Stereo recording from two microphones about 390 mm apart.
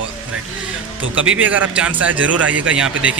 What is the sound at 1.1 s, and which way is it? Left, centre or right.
Speech, right.